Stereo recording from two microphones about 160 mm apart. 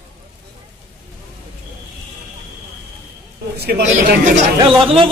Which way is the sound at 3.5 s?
80° right.